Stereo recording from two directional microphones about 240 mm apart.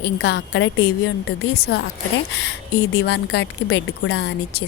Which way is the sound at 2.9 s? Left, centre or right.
Left.